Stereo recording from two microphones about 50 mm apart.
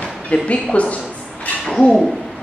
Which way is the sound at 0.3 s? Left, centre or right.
Left.